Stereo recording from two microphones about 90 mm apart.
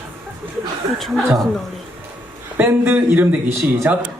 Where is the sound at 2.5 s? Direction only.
20° right (ahead or behind).